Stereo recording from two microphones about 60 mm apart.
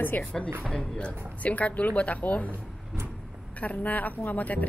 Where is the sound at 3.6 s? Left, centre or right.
Left.